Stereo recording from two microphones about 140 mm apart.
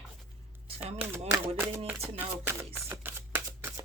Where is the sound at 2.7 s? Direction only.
15° right (ahead or behind).